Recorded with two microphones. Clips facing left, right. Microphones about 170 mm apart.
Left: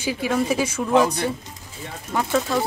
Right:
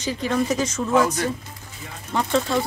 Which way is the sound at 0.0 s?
10° left (ahead or behind).